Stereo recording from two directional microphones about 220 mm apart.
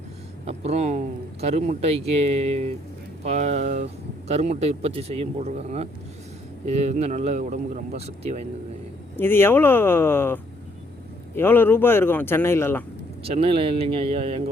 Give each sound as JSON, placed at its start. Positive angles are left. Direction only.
{"t": 0.4, "sound": "speech", "side_deg": -30}
{"t": 9.1, "sound": "speech", "side_deg": 10}
{"t": 13.2, "sound": "speech", "side_deg": -25}